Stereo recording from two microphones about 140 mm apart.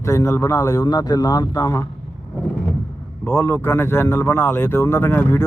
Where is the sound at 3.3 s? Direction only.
15° left (ahead or behind).